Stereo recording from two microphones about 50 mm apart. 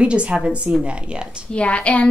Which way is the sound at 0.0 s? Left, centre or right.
Right.